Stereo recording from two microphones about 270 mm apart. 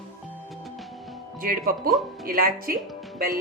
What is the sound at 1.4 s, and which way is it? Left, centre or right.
A woman's voice, right.